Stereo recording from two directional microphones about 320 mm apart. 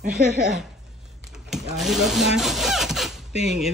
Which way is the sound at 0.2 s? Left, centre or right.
Right.